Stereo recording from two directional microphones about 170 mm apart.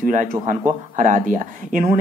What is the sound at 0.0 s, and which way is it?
Speech, 50° right (ahead or behind).